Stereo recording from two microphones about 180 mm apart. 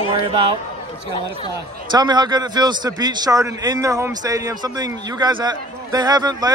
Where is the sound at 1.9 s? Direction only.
25° right (ahead or behind).